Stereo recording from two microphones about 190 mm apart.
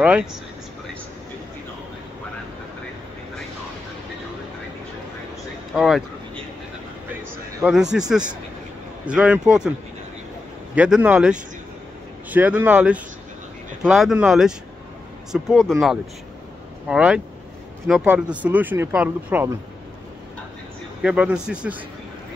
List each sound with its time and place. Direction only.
0.0 s a man's voice: 5° right (ahead or behind)
5.8 s a man's voice: centre (ahead or behind)
7.6 s a man's voice: 5° right (ahead or behind)
9.0 s a man's voice: 5° right (ahead or behind)
10.7 s a man's voice: 5° right (ahead or behind)
21.0 s a man's voice: 5° right (ahead or behind)